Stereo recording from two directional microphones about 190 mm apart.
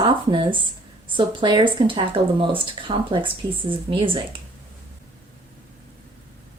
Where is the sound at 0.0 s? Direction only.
25° right (ahead or behind).